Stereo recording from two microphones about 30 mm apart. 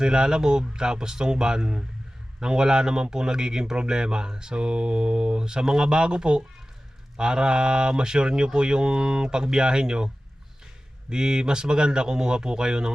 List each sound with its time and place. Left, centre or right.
0.0 s a man's voice: right
11.1 s a man's voice: right